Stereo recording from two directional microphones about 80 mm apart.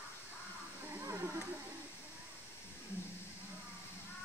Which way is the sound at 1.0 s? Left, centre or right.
Right.